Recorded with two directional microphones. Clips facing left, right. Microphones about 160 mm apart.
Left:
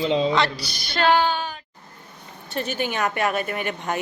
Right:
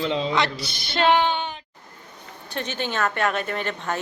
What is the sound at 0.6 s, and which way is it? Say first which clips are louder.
Female singing: even; 25° right (ahead or behind).